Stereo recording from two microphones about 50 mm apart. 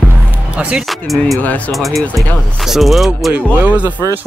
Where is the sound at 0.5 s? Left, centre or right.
Right.